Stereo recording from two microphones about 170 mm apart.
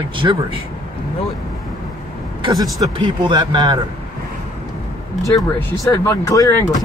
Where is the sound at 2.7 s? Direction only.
25° right (ahead or behind).